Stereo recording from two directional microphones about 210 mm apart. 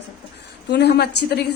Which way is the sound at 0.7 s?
50° left (ahead or behind).